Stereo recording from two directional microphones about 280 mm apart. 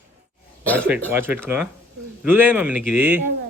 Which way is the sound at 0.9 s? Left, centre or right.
Centre.